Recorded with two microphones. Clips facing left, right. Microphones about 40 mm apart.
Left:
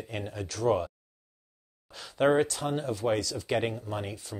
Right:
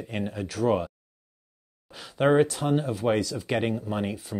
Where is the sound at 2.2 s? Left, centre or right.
Centre.